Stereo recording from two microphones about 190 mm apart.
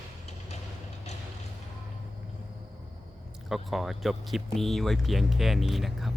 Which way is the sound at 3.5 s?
Centre (ahead or behind).